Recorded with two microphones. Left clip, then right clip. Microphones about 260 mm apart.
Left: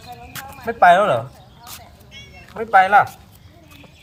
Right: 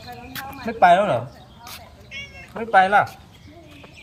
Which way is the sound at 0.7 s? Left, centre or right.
Centre.